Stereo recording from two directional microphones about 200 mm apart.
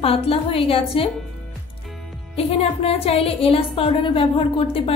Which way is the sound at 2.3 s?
30° left (ahead or behind).